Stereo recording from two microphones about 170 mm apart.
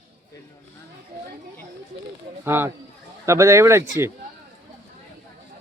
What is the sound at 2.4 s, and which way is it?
Speech, 15° right (ahead or behind).